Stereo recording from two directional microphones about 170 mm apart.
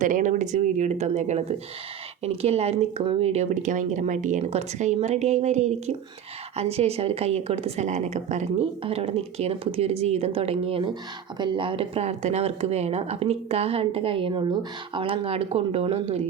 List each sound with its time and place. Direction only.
0.0 s speech: 50° right (ahead or behind)